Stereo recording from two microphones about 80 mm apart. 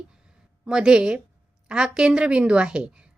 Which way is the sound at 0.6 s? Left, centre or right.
Centre.